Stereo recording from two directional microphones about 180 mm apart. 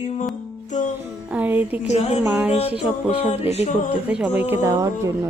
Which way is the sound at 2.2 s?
5° right (ahead or behind).